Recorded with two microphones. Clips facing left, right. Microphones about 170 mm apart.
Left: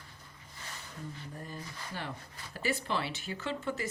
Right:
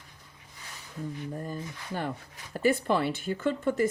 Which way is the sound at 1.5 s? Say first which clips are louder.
Right 7 dB; 50° right (ahead or behind).